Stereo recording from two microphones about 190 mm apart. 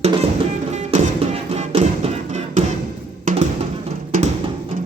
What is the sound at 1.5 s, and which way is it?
Music, 35° right (ahead or behind).